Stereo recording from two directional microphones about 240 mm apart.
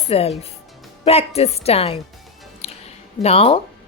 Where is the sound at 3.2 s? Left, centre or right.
Left.